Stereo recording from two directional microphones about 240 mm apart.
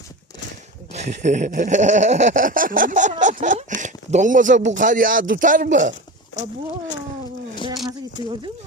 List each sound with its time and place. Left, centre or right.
0.9 s a sound: right
6.3 s speech: left
8.2 s speech: left